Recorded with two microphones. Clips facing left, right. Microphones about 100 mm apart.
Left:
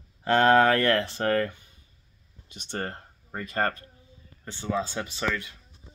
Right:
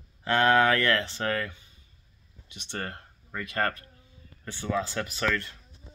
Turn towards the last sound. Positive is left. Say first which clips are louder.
# right 1 dB
turn(degrees=10)  # may be behind; listen again after turning